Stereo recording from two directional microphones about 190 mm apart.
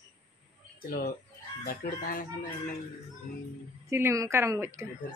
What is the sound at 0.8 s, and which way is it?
Speech, 50° left (ahead or behind).